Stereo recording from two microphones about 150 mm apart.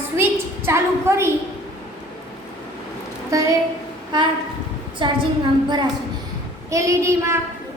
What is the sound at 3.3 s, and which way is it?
Child singing, 25° right (ahead or behind).